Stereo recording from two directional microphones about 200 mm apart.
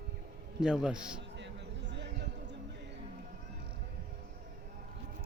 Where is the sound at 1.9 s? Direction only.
60° right (ahead or behind).